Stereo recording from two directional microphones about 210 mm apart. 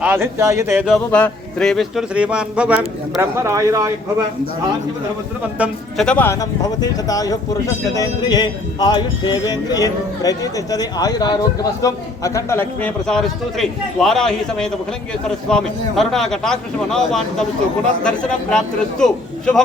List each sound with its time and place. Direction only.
0.0 s speech: 10° right (ahead or behind)
0.9 s speech: 5° left (ahead or behind); by 3.9 s 15° right (ahead or behind)
5.5 s speech: 5° right (ahead or behind)
6.1 s speech: 10° left (ahead or behind)